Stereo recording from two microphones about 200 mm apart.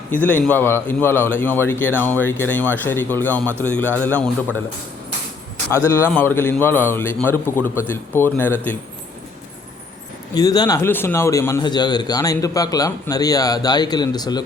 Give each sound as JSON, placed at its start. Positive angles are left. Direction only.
{"t": 0.1, "sound": "speech", "side_deg": 10}
{"t": 5.7, "sound": "speech", "side_deg": 15}
{"t": 10.3, "sound": "speech", "side_deg": 20}